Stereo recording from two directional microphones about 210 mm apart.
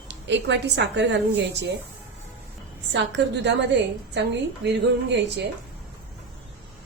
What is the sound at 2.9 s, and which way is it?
A woman's voice, 55° right (ahead or behind).